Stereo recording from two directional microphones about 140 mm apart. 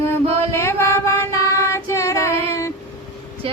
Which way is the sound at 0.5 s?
20° left (ahead or behind).